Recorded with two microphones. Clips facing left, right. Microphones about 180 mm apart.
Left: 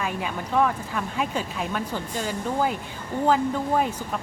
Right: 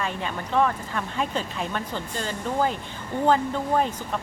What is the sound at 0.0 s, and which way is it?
Speech, 5° left (ahead or behind).